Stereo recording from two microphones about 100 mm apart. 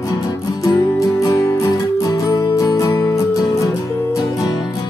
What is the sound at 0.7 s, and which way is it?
Music, 35° left (ahead or behind).